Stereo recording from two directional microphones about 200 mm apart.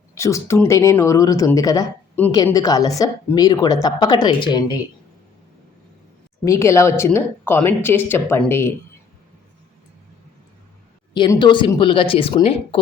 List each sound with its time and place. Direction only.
0.1 s speech: 15° left (ahead or behind)
6.4 s speech: 15° left (ahead or behind)
11.1 s speech: 25° left (ahead or behind)